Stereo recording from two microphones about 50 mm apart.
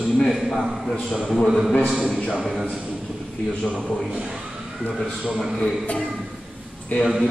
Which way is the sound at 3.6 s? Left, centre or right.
Centre.